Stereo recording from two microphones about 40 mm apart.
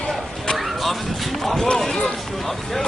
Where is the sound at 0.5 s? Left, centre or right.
Centre.